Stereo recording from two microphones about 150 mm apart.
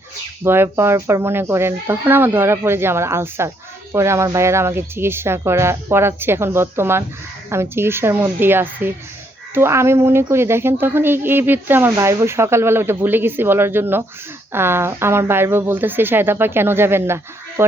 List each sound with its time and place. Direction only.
0.4 s speech: 15° right (ahead or behind)